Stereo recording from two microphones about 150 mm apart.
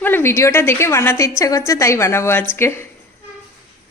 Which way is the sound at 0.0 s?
15° left (ahead or behind).